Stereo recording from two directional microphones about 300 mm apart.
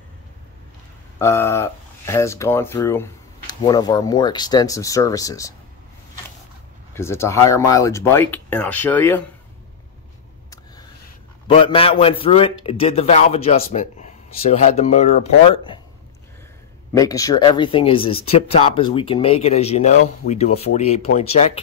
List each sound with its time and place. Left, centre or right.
1.2 s speech: centre
6.9 s speech: centre
11.4 s speech: centre
16.9 s speech: centre